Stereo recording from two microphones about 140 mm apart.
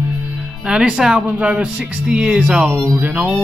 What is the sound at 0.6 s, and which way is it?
Speech, 5° right (ahead or behind).